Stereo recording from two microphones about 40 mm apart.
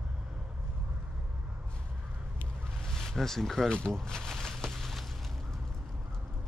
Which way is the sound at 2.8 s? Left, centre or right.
Centre.